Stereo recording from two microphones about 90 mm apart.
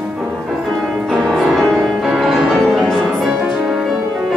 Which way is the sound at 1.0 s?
5° left (ahead or behind).